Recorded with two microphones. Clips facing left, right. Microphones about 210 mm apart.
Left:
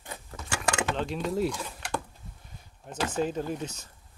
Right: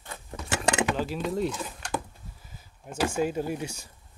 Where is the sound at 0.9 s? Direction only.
5° right (ahead or behind).